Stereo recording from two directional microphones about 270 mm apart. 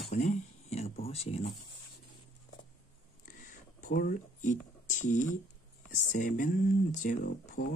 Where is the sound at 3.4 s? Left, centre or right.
Left.